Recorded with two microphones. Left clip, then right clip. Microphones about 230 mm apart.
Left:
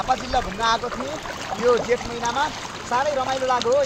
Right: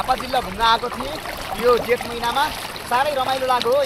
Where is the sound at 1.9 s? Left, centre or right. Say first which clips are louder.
Right 2 dB; centre.